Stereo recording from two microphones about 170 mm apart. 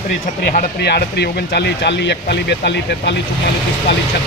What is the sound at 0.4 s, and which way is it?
Speech, 70° left (ahead or behind).